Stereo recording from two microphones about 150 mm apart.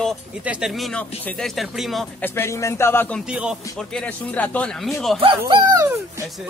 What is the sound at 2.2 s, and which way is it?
Speech, 15° left (ahead or behind).